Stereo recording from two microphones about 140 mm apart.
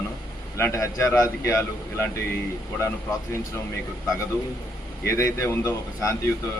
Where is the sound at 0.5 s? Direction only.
20° left (ahead or behind).